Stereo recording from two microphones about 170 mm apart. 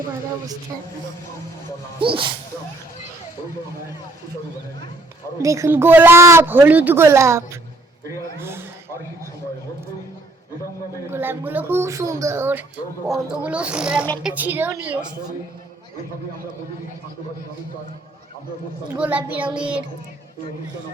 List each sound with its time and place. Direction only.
2.0 s speech: 30° right (ahead or behind)
5.4 s speech: 20° right (ahead or behind)
11.1 s speech: 10° right (ahead or behind)
18.9 s speech: 10° right (ahead or behind)